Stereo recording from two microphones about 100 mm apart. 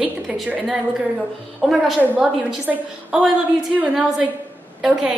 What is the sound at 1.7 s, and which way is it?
A woman's voice, centre (ahead or behind).